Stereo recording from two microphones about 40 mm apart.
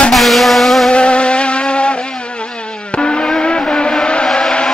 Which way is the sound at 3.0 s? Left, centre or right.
Left.